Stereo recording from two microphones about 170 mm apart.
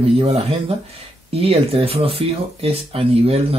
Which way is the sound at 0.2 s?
35° right (ahead or behind).